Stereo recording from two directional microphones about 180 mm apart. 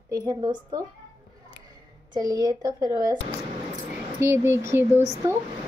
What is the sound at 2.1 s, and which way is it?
Speech, 20° right (ahead or behind).